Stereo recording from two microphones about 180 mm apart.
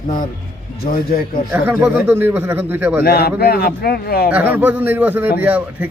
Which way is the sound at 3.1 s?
60° left (ahead or behind).